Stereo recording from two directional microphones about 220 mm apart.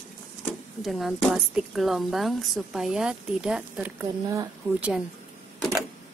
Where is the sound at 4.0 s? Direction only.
15° right (ahead or behind).